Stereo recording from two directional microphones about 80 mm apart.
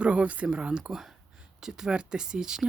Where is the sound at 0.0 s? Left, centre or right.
Centre.